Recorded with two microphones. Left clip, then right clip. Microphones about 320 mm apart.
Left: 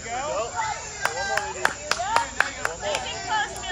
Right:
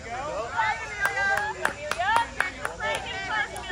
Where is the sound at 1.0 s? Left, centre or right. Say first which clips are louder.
Right 1 dB; left.